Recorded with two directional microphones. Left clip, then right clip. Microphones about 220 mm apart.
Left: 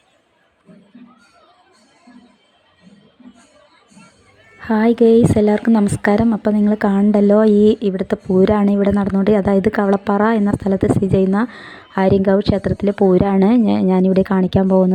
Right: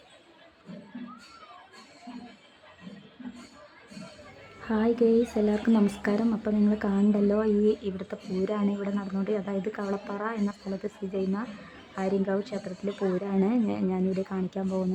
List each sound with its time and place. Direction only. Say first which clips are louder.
4.6 s speech: left 11 dB; 30° left (ahead or behind)